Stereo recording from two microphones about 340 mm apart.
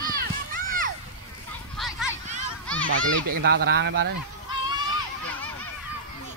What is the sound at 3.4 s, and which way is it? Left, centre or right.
Speech, right.